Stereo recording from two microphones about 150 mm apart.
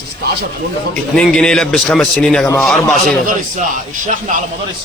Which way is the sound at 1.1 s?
5° left (ahead or behind).